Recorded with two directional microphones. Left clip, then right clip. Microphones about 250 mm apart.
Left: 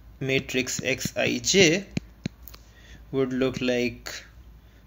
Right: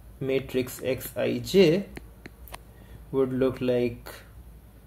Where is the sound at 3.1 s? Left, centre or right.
Centre.